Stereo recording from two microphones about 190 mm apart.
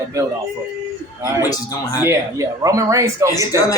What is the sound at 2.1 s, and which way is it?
Speech, 15° right (ahead or behind).